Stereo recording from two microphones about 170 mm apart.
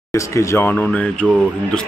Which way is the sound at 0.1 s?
15° left (ahead or behind).